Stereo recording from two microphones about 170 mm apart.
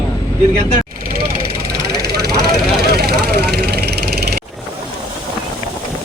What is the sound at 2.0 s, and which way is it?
Vehicle, 70° right (ahead or behind).